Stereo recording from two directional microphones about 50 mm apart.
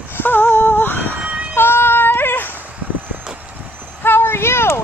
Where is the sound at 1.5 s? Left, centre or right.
Left.